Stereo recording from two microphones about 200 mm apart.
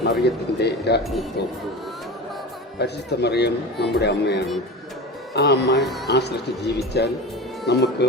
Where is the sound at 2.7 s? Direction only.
55° left (ahead or behind).